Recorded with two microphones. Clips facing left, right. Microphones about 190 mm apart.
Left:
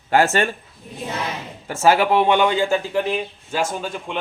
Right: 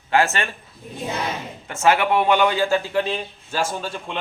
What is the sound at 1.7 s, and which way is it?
A man's voice, 30° left (ahead or behind).